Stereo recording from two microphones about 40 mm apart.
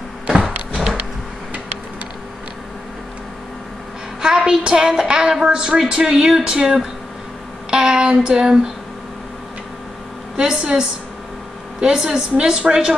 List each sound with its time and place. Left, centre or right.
0.3 s a sound: right
4.2 s a woman's voice: centre
6.0 s a woman's voice: centre
7.7 s child singing: centre
10.3 s a woman's voice: centre